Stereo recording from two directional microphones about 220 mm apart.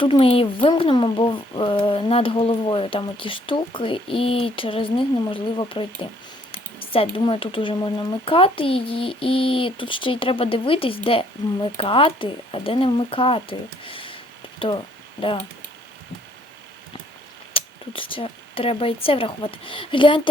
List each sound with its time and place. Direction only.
0.0 s speech: 25° left (ahead or behind)
17.5 s speech: 25° left (ahead or behind)